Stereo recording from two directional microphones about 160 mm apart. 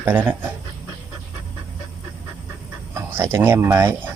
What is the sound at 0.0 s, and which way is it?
Speech, 15° right (ahead or behind).